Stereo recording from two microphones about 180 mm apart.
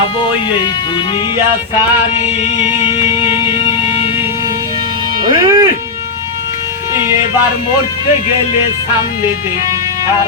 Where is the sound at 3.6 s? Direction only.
30° left (ahead or behind).